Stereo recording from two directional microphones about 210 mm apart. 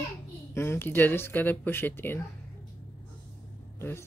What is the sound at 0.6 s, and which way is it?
Speech, 10° left (ahead or behind).